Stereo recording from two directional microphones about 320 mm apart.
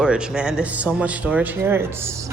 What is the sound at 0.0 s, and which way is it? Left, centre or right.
A man's voice, centre.